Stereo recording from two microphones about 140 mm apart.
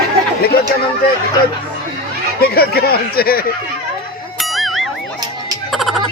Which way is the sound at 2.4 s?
90° left.